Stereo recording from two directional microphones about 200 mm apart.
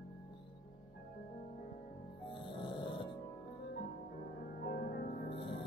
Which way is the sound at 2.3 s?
25° left (ahead or behind).